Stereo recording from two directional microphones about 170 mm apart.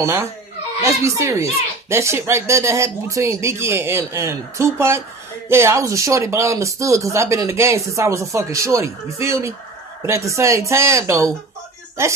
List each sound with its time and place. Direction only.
0.0 s speech: 15° right (ahead or behind)